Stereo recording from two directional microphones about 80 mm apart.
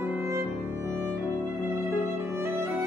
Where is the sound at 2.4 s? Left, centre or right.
Right.